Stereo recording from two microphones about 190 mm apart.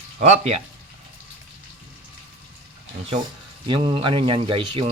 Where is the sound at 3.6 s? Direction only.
25° right (ahead or behind).